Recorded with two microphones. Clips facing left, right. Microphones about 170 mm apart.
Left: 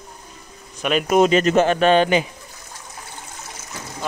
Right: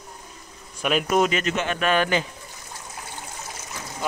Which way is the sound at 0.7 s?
5° right (ahead or behind).